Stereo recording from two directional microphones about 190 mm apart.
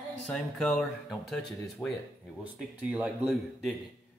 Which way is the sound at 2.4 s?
5° right (ahead or behind).